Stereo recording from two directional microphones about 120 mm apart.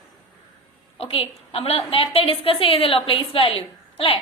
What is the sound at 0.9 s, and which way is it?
A woman's voice, 55° left (ahead or behind).